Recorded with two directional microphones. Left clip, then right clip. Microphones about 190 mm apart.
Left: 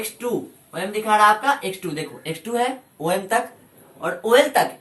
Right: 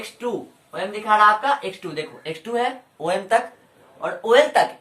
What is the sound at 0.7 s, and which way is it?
Speech, 5° right (ahead or behind).